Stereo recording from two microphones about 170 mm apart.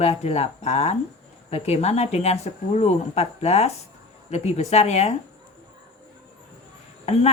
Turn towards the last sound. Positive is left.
turn(degrees=40)  # may be behind; listen again after turning